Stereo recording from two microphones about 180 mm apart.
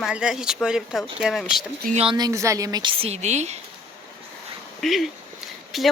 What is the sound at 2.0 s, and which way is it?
Speech, 25° right (ahead or behind).